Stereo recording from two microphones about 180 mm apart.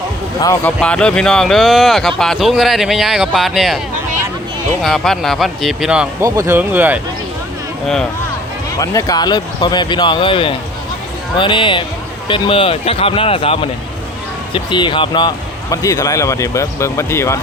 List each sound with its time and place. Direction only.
0.4 s speech: 10° left (ahead or behind)
4.8 s speech: centre (ahead or behind)
6.2 s speech: 15° right (ahead or behind)
8.8 s speech: 20° left (ahead or behind)